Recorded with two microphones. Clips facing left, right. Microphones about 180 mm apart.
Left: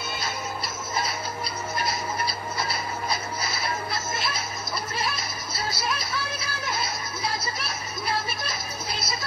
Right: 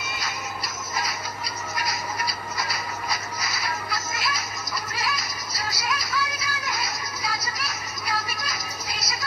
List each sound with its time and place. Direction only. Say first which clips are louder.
0.0 s music: left 1 dB; 30° left (ahead or behind)
1.8 s a sound: left 1 dB; 30° left (ahead or behind)
4.9 s music: even; 30° left (ahead or behind)